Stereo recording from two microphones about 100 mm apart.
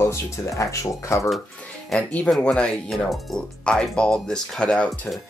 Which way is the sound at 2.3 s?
5° left (ahead or behind).